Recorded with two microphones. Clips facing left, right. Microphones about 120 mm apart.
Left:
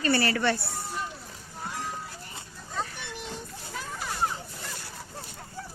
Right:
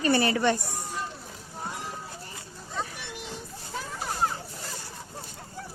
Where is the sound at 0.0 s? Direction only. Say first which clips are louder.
Right 2 dB; 20° right (ahead or behind).